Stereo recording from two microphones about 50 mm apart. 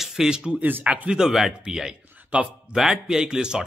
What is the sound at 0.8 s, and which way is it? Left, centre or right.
Speech, right.